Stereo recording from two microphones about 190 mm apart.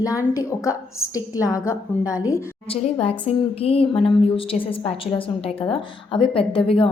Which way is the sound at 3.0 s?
30° left (ahead or behind).